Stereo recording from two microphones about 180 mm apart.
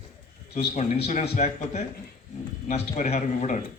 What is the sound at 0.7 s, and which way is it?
Speech, 40° left (ahead or behind).